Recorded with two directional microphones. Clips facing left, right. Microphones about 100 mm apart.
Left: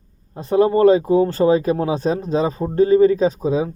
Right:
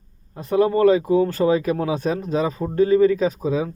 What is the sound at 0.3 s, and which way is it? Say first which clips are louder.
Speech: left 3 dB; 25° left (ahead or behind).